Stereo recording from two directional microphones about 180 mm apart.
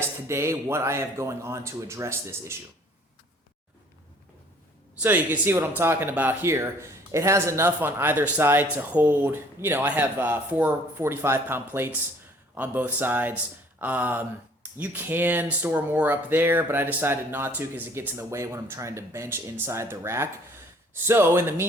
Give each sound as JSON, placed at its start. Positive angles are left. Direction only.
{"t": 0.3, "sound": "speech", "side_deg": -15}
{"t": 5.0, "sound": "speech", "side_deg": -10}